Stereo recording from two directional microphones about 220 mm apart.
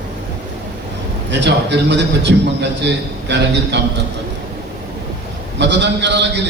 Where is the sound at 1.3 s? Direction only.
50° right (ahead or behind).